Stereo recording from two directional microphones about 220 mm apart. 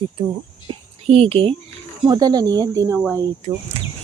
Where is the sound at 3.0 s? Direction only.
5° right (ahead or behind).